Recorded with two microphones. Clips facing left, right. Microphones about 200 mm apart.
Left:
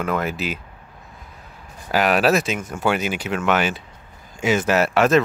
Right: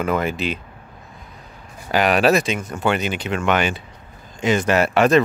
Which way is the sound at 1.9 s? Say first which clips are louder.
Right 1 dB; centre (ahead or behind).